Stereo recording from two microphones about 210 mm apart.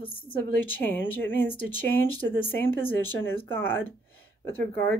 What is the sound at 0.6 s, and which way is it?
Speech, 10° left (ahead or behind).